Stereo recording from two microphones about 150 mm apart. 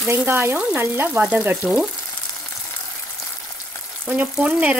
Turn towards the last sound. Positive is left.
turn(degrees=-5)  # may be behind; listen again after turning